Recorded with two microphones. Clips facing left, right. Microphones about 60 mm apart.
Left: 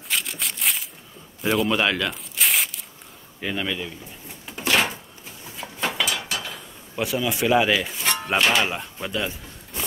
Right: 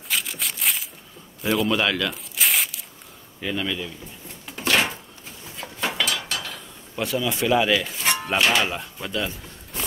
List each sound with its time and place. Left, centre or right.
0.1 s a sound: centre
1.4 s speech: centre
1.7 s speech: left
2.3 s tearing: centre
3.3 s speech: centre
4.5 s a sound: centre
8.0 s music: centre
8.4 s speech: centre
8.6 s speech: centre